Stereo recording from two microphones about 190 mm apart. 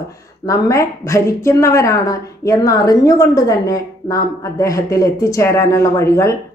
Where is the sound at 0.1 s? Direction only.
15° left (ahead or behind).